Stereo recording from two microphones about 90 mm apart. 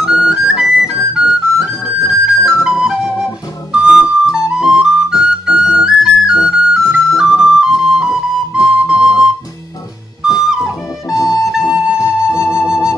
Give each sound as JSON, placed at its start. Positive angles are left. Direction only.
{"t": 0.0, "sound": "music", "side_deg": -5}
{"t": 2.6, "sound": "flute", "side_deg": -10}
{"t": 3.7, "sound": "music", "side_deg": -10}
{"t": 11.1, "sound": "music", "side_deg": 40}
{"t": 11.7, "sound": "flute", "side_deg": -10}
{"t": 12.4, "sound": "music", "side_deg": -10}